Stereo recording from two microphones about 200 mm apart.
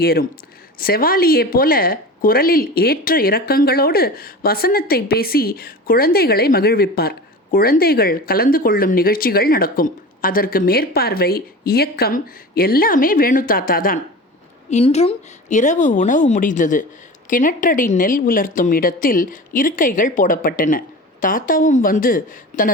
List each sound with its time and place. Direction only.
0.0 s a woman's voice: 50° left (ahead or behind)
14.7 s a woman's voice: 35° left (ahead or behind)